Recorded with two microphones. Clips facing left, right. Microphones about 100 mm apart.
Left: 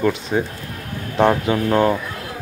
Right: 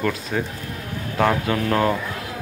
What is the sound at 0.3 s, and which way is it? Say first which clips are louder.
Speech: left 4 dB; 25° left (ahead or behind).